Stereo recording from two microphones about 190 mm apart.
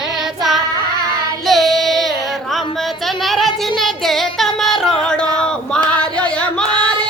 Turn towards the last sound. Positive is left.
turn(degrees=5)  # may be behind; listen again after turning